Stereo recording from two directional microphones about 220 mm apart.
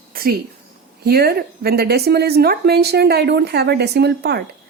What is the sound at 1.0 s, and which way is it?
A woman's voice, 45° right (ahead or behind).